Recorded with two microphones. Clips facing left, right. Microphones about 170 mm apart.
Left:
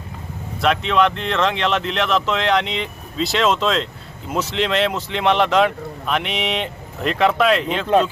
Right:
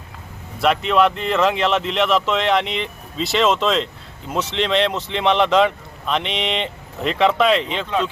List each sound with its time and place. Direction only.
0.6 s speech: 5° right (ahead or behind)